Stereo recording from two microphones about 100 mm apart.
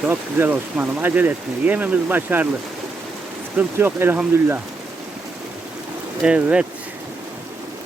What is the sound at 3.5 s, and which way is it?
Speech, 20° right (ahead or behind).